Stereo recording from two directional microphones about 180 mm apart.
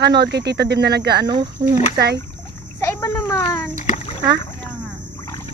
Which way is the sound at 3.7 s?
40° left (ahead or behind).